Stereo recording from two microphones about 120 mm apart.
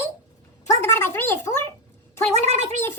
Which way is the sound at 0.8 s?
20° left (ahead or behind).